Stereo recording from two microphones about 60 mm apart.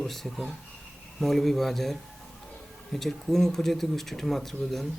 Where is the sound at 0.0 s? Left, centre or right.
Centre.